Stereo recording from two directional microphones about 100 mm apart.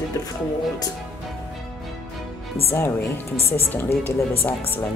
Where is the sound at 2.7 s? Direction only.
25° left (ahead or behind).